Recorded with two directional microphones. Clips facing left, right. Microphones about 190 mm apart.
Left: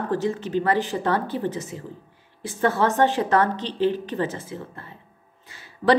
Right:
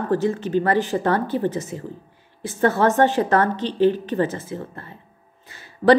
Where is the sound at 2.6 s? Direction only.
50° right (ahead or behind).